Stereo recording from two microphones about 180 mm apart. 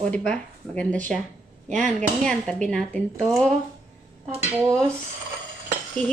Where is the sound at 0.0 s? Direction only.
5° left (ahead or behind).